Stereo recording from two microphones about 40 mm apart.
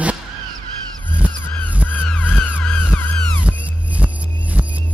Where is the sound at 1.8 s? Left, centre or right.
Left.